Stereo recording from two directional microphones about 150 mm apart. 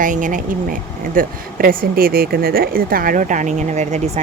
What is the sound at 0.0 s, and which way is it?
Speech, 60° right (ahead or behind).